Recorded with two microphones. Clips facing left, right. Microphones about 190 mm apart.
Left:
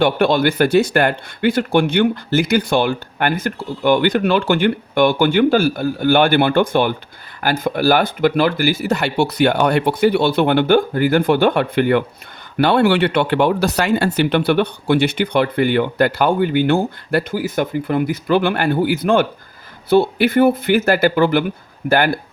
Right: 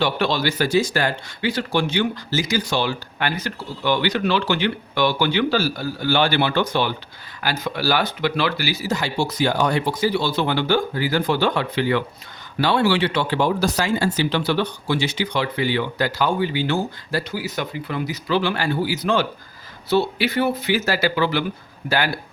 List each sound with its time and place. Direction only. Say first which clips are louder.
0.0 s speech: left 6 dB; 55° left (ahead or behind)